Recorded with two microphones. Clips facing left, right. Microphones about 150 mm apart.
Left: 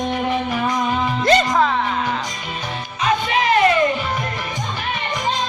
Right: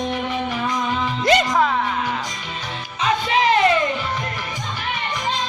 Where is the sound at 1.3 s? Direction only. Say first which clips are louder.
Left 1 dB; 15° right (ahead or behind).